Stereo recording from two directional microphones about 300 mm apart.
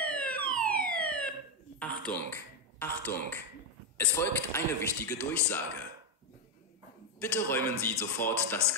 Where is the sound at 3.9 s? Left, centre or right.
Centre.